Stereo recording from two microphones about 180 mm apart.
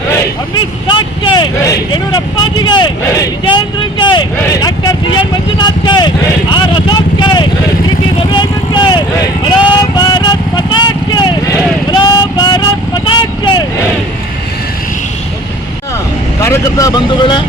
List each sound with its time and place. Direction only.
0.5 s speech: 25° left (ahead or behind)
6.5 s vehicle: 25° left (ahead or behind)
16.4 s speech: 15° left (ahead or behind)